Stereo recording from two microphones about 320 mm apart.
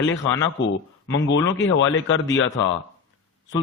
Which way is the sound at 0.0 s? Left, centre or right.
Left.